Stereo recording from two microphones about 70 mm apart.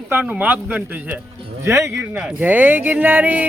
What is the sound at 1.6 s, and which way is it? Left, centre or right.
Speech, right.